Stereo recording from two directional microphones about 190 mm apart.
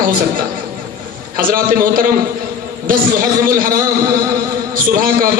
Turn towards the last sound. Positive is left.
turn(degrees=-45)  # may be behind; listen again after turning